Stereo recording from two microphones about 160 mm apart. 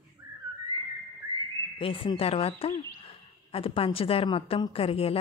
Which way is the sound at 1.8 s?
35° left (ahead or behind).